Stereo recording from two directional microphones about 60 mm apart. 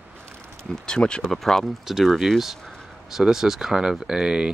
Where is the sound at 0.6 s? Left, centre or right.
Centre.